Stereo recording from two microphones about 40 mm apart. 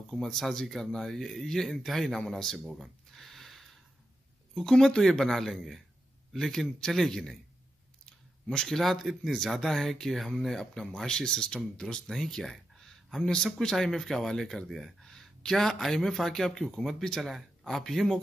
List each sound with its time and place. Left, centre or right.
0.1 s speech: centre
11.8 s speech: centre
14.5 s speech: centre
15.0 s speech: centre